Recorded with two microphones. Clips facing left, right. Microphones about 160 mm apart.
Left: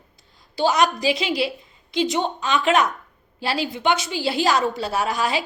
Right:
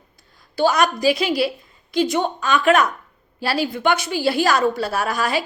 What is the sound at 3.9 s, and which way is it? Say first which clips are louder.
Speech: right 2 dB; 55° right (ahead or behind).